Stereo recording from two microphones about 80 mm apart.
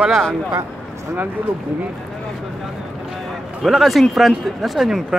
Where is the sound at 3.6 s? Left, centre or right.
Centre.